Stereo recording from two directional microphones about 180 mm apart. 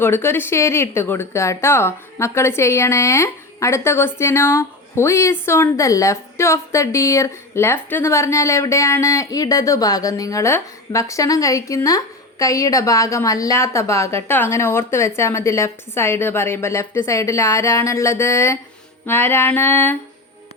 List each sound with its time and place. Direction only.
0.0 s speech: 15° left (ahead or behind)